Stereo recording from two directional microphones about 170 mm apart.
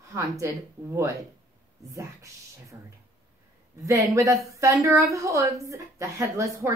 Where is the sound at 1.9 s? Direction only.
20° right (ahead or behind).